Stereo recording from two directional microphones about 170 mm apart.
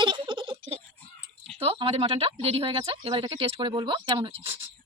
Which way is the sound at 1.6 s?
35° right (ahead or behind).